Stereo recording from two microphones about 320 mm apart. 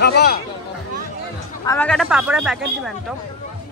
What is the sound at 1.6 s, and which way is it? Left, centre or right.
Speech, centre.